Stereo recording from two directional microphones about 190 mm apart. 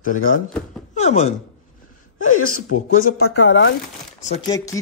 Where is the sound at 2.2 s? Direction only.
40° left (ahead or behind).